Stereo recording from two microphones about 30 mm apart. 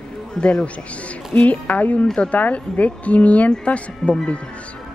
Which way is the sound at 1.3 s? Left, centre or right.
Left.